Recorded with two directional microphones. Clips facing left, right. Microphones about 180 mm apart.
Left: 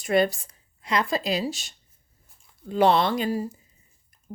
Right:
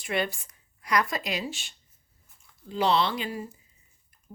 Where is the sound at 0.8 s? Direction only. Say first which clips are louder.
Left 2 dB; 25° left (ahead or behind).